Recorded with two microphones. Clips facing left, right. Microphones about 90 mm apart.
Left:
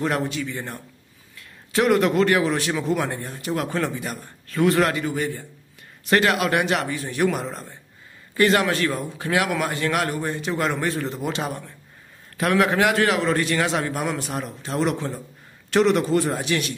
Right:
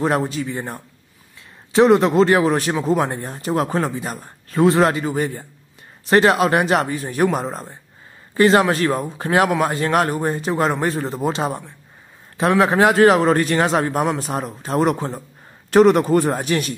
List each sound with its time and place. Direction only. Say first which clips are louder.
0.0 s a man's voice: right 4 dB; 35° right (ahead or behind)